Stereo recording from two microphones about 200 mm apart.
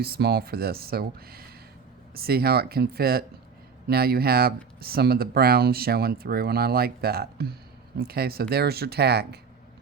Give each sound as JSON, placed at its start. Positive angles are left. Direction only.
{"t": 0.0, "sound": "speech", "side_deg": -50}